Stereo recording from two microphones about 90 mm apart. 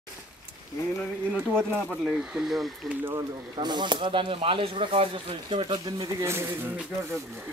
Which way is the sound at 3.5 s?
55° right (ahead or behind).